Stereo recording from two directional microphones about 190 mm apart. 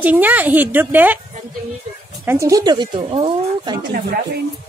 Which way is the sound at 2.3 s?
15° right (ahead or behind).